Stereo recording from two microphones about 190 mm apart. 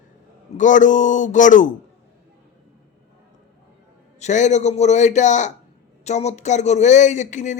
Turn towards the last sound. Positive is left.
turn(degrees=40)  # may be behind; listen again after turning